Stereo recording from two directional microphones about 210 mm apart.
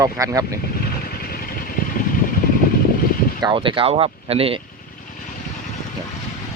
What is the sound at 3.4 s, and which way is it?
Speech, 25° right (ahead or behind).